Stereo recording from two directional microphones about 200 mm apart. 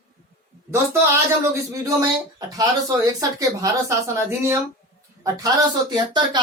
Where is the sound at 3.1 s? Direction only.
15° right (ahead or behind).